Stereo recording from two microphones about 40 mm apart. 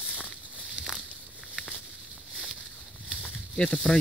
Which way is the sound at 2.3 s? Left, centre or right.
Centre.